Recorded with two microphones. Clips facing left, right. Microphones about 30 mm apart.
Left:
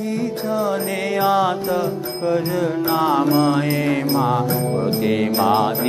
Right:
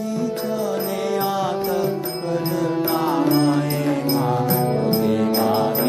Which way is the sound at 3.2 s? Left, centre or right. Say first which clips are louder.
Left 1 dB; centre.